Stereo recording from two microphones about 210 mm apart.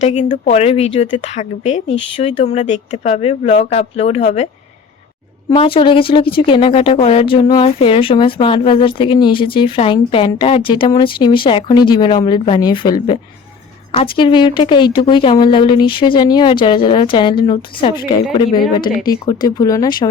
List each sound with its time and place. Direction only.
0.0 s a woman's voice: 35° left (ahead or behind)
5.5 s speech: 25° left (ahead or behind)